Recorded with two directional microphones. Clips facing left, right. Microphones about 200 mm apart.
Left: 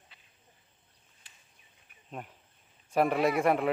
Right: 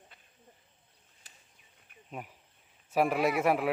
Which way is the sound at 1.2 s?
40° right (ahead or behind).